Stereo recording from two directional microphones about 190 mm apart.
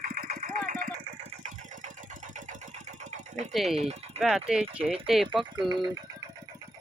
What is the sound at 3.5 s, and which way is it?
Speech, centre (ahead or behind).